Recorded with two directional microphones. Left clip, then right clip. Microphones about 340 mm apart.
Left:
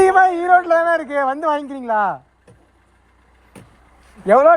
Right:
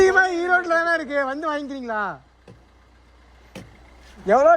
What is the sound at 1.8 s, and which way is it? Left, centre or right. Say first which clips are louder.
Speech: left 8 dB; centre.